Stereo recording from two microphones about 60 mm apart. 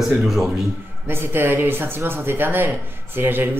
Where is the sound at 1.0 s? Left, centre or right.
Right.